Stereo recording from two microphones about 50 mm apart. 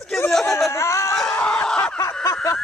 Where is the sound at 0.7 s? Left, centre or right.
Left.